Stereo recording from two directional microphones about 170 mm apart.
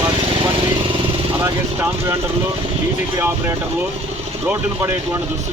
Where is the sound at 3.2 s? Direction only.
15° right (ahead or behind).